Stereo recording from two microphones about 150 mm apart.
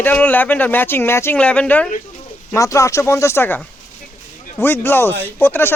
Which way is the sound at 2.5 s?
20° left (ahead or behind).